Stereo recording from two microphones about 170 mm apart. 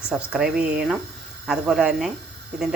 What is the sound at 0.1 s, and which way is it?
Speech, 5° right (ahead or behind).